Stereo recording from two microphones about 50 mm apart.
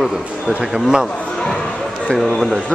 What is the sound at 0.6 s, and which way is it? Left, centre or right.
Speech, centre.